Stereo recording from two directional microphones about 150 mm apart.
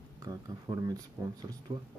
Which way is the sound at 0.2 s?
25° right (ahead or behind).